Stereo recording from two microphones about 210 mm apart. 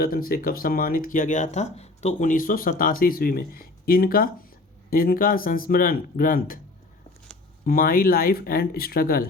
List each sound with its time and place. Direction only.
0.0 s speech: 45° left (ahead or behind)
7.6 s speech: 45° left (ahead or behind)